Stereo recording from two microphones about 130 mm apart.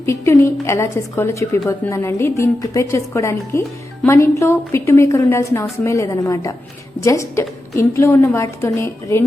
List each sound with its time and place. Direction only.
0.0 s a woman's voice: 20° left (ahead or behind)